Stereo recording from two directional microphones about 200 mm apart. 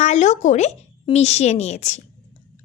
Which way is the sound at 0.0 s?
35° left (ahead or behind).